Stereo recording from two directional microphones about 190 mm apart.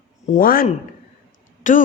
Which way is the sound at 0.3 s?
50° left (ahead or behind).